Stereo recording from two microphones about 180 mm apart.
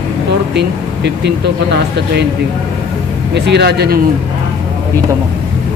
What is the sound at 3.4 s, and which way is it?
Speech, 70° right (ahead or behind).